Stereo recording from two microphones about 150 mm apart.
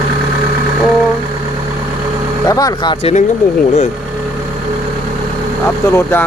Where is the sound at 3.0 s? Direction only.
45° left (ahead or behind).